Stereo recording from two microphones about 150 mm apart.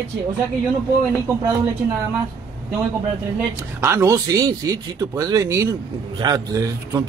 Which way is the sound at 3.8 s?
20° right (ahead or behind).